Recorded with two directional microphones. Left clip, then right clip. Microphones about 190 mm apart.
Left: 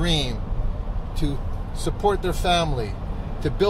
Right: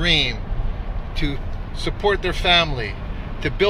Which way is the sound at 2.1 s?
20° left (ahead or behind).